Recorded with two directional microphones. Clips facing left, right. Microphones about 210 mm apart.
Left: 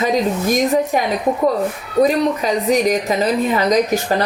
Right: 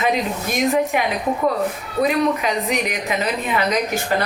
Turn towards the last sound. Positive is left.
turn(degrees=40)  # may be behind; listen again after turning